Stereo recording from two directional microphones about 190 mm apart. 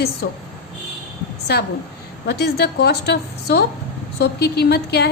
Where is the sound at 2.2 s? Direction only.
60° left (ahead or behind).